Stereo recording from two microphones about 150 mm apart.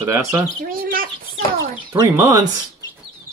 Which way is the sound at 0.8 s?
70° right (ahead or behind).